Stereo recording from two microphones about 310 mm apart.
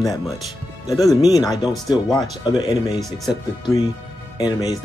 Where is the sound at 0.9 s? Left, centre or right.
Centre.